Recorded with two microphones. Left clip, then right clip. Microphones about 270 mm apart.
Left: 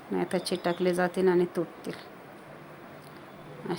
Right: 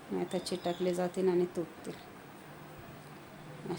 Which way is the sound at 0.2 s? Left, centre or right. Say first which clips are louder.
Left 6 dB; centre.